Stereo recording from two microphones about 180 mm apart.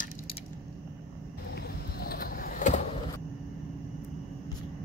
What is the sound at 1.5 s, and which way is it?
Vehicle, 60° left (ahead or behind).